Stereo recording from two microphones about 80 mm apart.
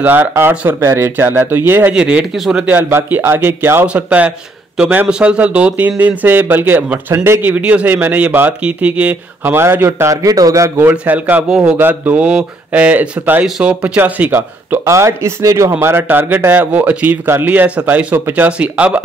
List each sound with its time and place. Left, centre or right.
0.0 s speech: right
1.9 s speech: centre
2.3 s a man's voice: centre
2.6 s speech: right
3.8 s speech: centre
10.2 s a man's voice: right
11.1 s speech: centre
11.4 s speech: centre; by 14.8 s right
14.9 s speech: right; by 19.0 s centre